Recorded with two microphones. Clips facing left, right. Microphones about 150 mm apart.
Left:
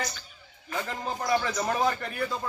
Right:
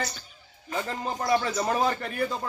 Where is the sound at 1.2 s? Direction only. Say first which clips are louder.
Right 2 dB; 30° right (ahead or behind).